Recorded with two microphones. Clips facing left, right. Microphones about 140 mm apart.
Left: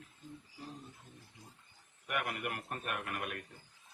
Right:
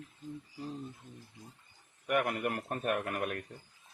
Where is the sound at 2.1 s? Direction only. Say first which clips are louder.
Right 7 dB; 40° right (ahead or behind).